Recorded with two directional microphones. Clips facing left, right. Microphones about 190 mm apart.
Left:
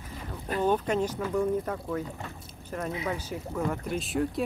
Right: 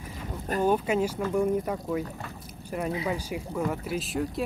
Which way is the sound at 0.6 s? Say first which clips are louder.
Right 1 dB; 10° right (ahead or behind).